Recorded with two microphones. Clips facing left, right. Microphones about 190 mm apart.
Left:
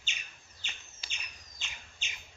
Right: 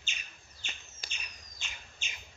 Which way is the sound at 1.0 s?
45° right (ahead or behind).